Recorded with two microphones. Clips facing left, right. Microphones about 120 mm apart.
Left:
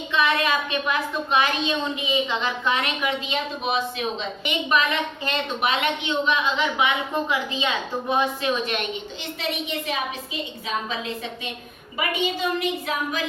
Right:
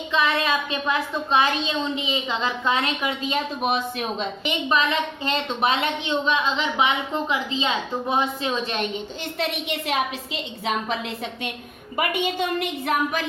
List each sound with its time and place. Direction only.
0.1 s a woman's voice: 25° right (ahead or behind)
3.2 s a woman's voice: 45° right (ahead or behind)
4.7 s a woman's voice: 30° right (ahead or behind)
9.4 s a child's voice: 65° right (ahead or behind)
11.9 s a woman's voice: 55° right (ahead or behind)